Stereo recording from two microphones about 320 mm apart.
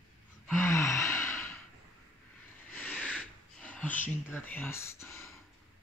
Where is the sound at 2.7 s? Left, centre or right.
Centre.